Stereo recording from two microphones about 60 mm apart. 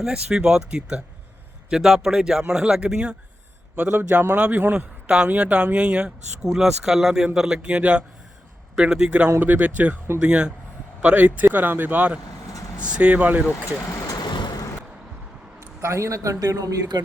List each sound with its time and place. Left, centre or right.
0.0 s speech: centre
4.4 s speech: right
13.9 s vehicle: left
15.6 s speech: right
16.9 s speech: right